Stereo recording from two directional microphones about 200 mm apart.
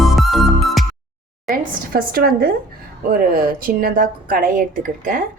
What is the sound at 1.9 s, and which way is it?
A woman's voice, 50° right (ahead or behind).